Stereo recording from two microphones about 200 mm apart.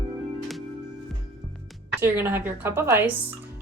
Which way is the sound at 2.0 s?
10° right (ahead or behind).